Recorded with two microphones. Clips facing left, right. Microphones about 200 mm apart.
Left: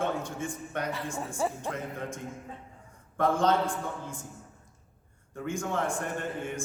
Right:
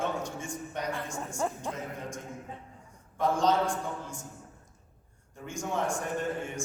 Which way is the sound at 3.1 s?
55° left (ahead or behind).